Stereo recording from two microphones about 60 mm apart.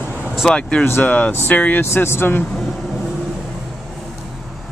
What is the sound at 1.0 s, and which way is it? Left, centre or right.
Speech, left.